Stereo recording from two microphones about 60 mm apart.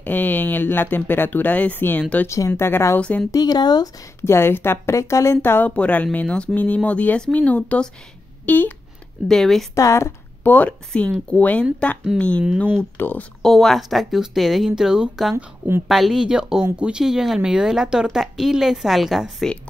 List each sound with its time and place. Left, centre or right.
0.0 s speech: left
2.2 s speech: left
2.6 s speech: left
3.0 s speech: left
3.3 s speech: left
4.2 s speech: left
5.8 s speech: left
8.5 s speech: left
9.3 s speech: centre
9.8 s speech: left
10.4 s a woman's voice: left
10.9 s speech: centre
12.9 s speech: left
13.4 s speech: centre